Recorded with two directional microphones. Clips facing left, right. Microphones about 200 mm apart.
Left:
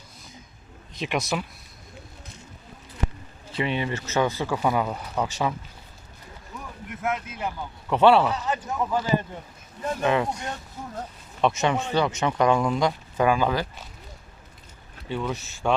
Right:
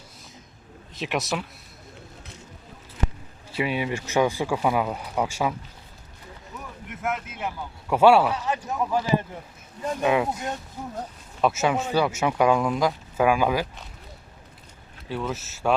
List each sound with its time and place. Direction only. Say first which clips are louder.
0.9 s speech: even; centre (ahead or behind)
3.5 s speech: right 1 dB; 5° right (ahead or behind)
6.8 s speech: left 1 dB; centre (ahead or behind)
11.3 s speech: even; 5° right (ahead or behind)
15.1 s speech: left 1 dB; 5° right (ahead or behind)